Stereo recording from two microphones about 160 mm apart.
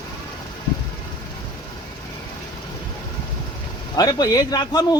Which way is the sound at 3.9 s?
25° left (ahead or behind).